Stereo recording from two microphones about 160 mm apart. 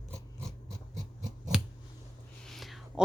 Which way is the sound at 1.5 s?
5° right (ahead or behind).